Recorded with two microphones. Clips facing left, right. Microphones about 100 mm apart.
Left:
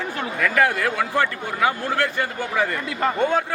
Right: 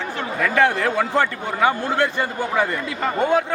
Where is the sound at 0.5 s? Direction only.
25° right (ahead or behind).